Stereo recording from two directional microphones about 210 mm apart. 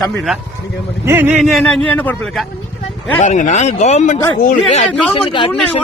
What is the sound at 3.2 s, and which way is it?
Speech, 35° left (ahead or behind).